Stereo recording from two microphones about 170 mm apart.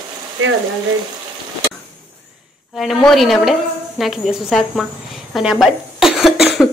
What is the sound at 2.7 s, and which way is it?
A man's voice, centre (ahead or behind).